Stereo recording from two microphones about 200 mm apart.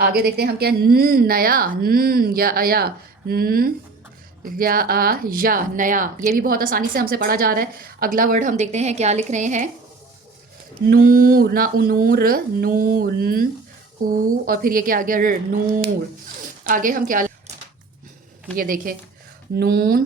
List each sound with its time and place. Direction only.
0.0 s speech: 50° right (ahead or behind)
10.8 s speech: 45° right (ahead or behind)
16.2 s zipper: 45° right (ahead or behind)
18.5 s speech: 45° right (ahead or behind)